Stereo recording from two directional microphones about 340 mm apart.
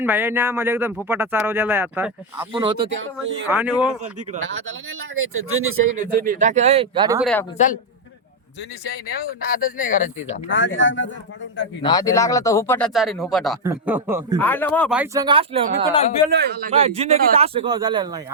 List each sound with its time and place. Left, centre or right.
0.0 s speech: centre
2.8 s speech: right
3.5 s speech: centre
4.4 s speech: right
6.1 s a man's voice: right
9.5 s speech: left
10.5 s speech: left
11.8 s speech: centre
14.3 s speech: centre
16.3 s speech: right; by 18.2 s centre